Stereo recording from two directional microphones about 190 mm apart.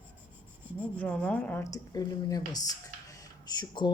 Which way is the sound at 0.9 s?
5° left (ahead or behind).